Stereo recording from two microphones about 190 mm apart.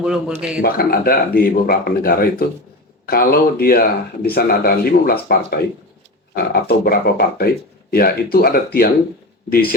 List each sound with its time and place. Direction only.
0.0 s a man's voice: 5° right (ahead or behind)
0.6 s speech: 55° left (ahead or behind)